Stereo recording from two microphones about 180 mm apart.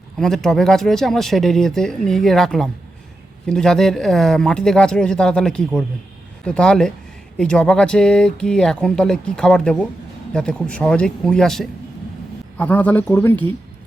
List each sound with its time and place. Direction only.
0.2 s a man's voice: centre (ahead or behind)